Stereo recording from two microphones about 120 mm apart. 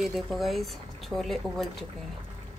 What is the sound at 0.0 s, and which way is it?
Speech, centre (ahead or behind).